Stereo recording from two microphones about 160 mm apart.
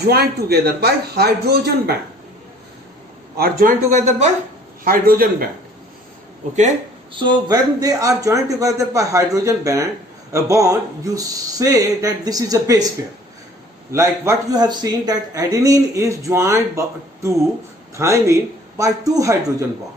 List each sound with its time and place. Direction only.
0.0 s a man's voice: 80° right
3.3 s speech: 70° right (ahead or behind)
3.9 s speech: 45° right (ahead or behind)
4.8 s a man's voice: 65° right (ahead or behind)
7.1 s a man's voice: 30° right (ahead or behind)
13.9 s a man's voice: 15° right (ahead or behind)
17.9 s a man's voice: 20° right (ahead or behind)